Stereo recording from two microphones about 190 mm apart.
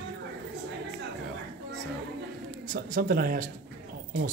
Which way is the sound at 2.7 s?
50° right (ahead or behind).